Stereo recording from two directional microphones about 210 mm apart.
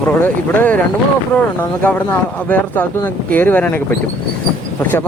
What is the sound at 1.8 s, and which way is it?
Speech, 10° left (ahead or behind).